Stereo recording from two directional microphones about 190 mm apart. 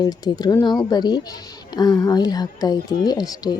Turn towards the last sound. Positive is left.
turn(degrees=20)  # may be behind; listen again after turning